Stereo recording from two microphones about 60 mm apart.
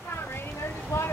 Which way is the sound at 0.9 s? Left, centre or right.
Left.